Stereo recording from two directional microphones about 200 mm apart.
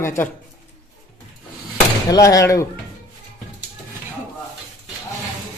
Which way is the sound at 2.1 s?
15° left (ahead or behind).